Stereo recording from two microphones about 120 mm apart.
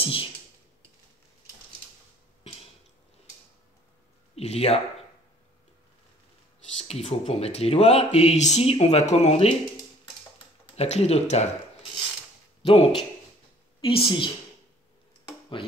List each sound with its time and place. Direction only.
0.0 s speech: 50° left (ahead or behind)
4.4 s speech: 60° left (ahead or behind)
6.8 s speech: 60° left (ahead or behind)
10.8 s speech: 60° left (ahead or behind)
12.6 s a woman's voice: 50° left (ahead or behind)